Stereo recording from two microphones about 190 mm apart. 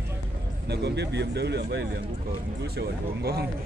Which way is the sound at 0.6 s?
60° right (ahead or behind).